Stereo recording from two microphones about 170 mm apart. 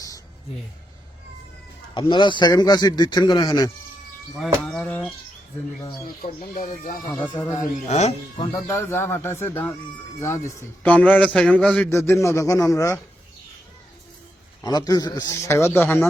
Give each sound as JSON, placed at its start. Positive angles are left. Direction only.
{"t": 2.0, "sound": "speech", "side_deg": 25}
{"t": 4.4, "sound": "speech", "side_deg": 0}
{"t": 6.2, "sound": "speech", "side_deg": 50}
{"t": 7.1, "sound": "a man's voice", "side_deg": 10}
{"t": 7.5, "sound": "speech", "side_deg": 45}
{"t": 8.5, "sound": "a man's voice", "side_deg": 15}
{"t": 11.9, "sound": "a man's voice", "side_deg": 15}
{"t": 14.6, "sound": "speech", "side_deg": 20}